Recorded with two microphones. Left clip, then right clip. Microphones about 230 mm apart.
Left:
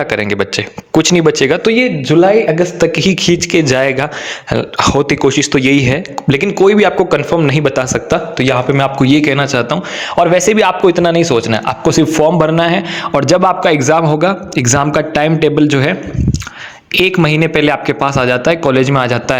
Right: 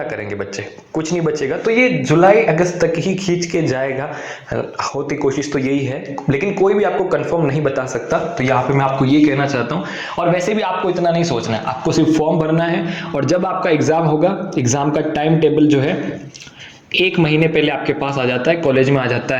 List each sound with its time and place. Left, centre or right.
0.9 s a man's voice: left
8.4 s a man's voice: left
17.1 s a man's voice: left